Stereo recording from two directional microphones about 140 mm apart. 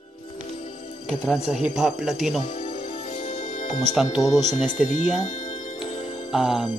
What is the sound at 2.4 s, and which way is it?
Music, 65° left (ahead or behind).